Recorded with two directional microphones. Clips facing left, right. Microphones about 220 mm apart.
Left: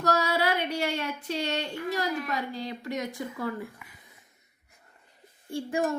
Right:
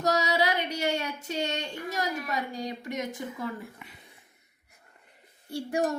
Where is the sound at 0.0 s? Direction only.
15° right (ahead or behind).